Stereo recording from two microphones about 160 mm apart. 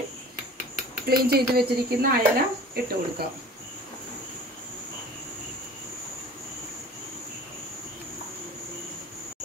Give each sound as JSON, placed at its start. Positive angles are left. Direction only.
{"t": 1.0, "sound": "speech", "side_deg": -75}